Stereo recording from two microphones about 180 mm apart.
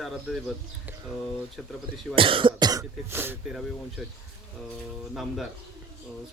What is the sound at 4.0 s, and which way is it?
Speech, centre (ahead or behind).